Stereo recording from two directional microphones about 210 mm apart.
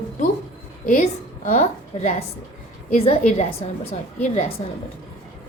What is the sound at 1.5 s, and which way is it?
A woman's voice, 35° left (ahead or behind).